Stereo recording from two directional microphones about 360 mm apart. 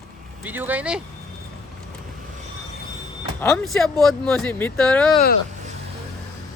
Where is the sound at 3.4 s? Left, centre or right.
Centre.